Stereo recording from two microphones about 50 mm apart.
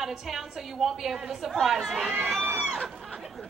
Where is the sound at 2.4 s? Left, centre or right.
Centre.